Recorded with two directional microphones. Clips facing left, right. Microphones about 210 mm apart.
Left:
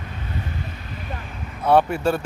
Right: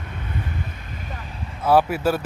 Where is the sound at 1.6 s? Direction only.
5° right (ahead or behind).